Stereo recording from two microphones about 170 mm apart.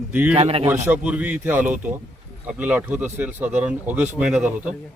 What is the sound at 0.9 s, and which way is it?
Speech, 5° right (ahead or behind).